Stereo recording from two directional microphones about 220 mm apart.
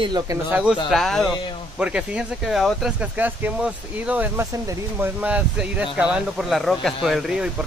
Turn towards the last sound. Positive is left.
turn(degrees=0)  # may be behind; listen again after turning